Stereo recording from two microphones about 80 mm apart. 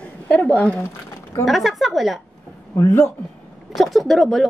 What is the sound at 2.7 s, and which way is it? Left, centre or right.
Speech, left.